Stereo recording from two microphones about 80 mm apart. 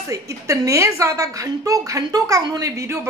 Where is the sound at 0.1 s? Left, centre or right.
Right.